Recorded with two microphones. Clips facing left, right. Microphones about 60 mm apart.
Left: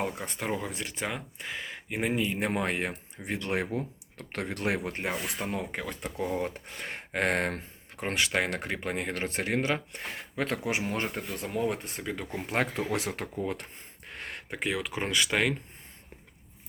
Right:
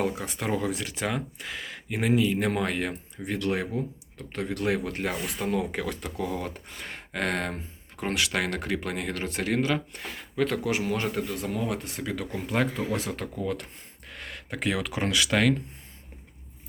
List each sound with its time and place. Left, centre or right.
0.3 s speech: centre; by 4.9 s left
4.9 s speech: centre
5.1 s speech: centre; by 6.6 s left
6.8 s a sound: left
8.0 s speech: left
10.9 s speech: centre
12.1 s speech: centre
12.5 s speech: left
14.5 s speech: centre